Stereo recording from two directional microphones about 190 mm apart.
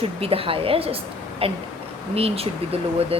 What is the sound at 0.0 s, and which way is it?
Speech, 30° right (ahead or behind).